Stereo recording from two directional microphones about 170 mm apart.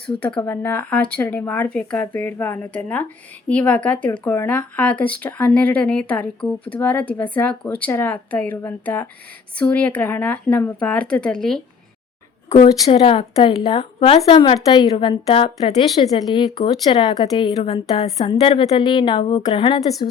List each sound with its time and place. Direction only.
0.2 s speech: 5° left (ahead or behind)
12.6 s a woman's voice: 30° left (ahead or behind)